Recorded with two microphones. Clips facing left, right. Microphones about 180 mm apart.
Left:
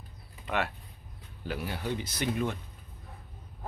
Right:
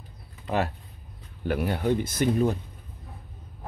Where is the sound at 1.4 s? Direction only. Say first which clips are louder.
Right 9 dB; 60° right (ahead or behind).